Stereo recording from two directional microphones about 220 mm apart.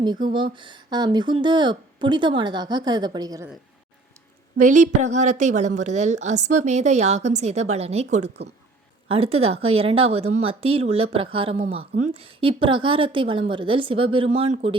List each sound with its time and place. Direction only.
0.0 s speech: 20° right (ahead or behind)
4.5 s a woman's voice: 35° right (ahead or behind)